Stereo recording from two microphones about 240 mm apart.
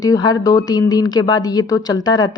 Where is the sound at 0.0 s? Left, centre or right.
Centre.